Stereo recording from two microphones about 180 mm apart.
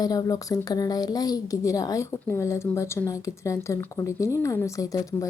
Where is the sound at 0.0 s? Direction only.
20° left (ahead or behind).